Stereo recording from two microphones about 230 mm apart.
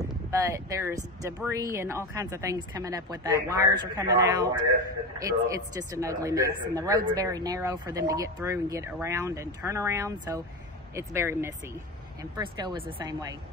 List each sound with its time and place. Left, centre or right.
0.3 s speech: centre